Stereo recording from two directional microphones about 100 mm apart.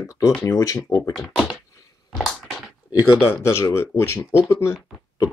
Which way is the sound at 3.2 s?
25° left (ahead or behind).